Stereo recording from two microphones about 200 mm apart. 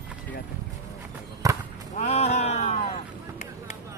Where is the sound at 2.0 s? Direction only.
35° left (ahead or behind).